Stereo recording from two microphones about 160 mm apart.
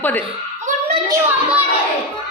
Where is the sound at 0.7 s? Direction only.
50° right (ahead or behind).